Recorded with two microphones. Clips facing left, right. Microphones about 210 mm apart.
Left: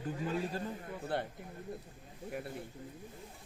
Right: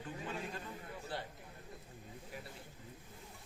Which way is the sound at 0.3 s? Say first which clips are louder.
Left 8 dB; 35° left (ahead or behind).